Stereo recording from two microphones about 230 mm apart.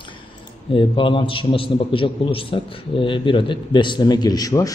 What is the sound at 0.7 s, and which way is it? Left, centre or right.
A man's voice, left.